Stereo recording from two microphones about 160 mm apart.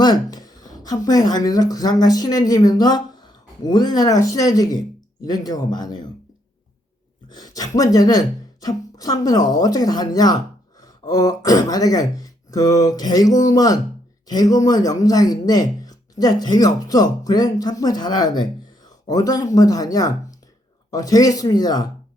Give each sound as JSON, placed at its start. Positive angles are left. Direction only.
{"t": 0.0, "sound": "speech", "side_deg": 25}
{"t": 7.3, "sound": "speech", "side_deg": 25}